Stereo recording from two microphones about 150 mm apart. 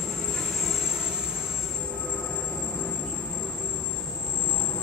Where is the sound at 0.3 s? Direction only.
Centre (ahead or behind).